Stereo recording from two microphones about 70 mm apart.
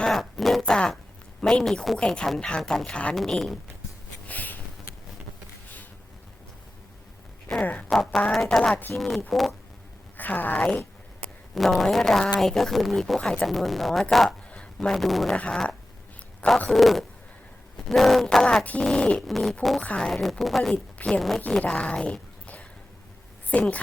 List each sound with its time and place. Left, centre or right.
0.0 s a sound: centre
1.4 s speech: centre
3.2 s speech: centre
4.3 s a sound: left
7.5 s speech: centre
7.9 s speech: centre
10.2 s a woman's voice: left
11.5 s speech: centre
14.3 s speech: centre
15.3 s speech: centre
18.4 s speech: centre
19.3 s speech: centre
20.7 s speech: centre